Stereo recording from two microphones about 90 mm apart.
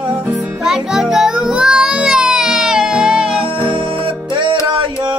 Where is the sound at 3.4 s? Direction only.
70° right (ahead or behind).